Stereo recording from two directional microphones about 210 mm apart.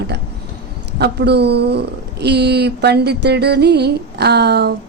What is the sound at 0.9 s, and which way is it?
A woman's voice, 50° right (ahead or behind).